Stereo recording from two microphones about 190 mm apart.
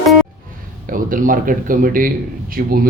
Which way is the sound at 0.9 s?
45° right (ahead or behind).